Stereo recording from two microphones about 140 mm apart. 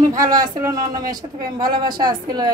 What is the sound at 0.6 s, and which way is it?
Speech, 25° right (ahead or behind).